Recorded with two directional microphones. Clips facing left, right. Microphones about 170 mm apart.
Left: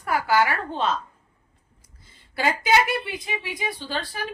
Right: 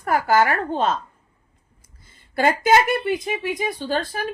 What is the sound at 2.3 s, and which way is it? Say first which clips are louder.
A woman's voice: right 4 dB; 50° right (ahead or behind).